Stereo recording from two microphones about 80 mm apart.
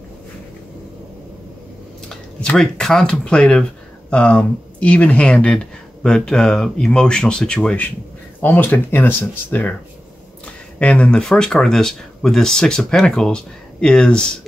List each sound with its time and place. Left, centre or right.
2.5 s speech: centre; by 9.8 s left
10.8 s speech: centre